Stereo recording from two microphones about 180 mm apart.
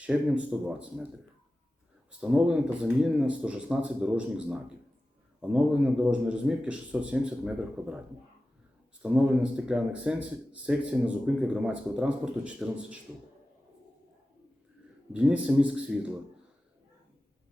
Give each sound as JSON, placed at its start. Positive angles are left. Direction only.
{"t": 0.0, "sound": "a man's voice", "side_deg": -5}
{"t": 2.0, "sound": "a man's voice", "side_deg": -5}
{"t": 9.0, "sound": "speech", "side_deg": -5}
{"t": 15.1, "sound": "a man's voice", "side_deg": -5}